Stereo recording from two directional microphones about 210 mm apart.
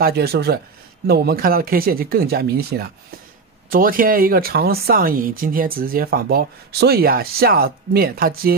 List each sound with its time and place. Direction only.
0.0 s speech: 50° right (ahead or behind)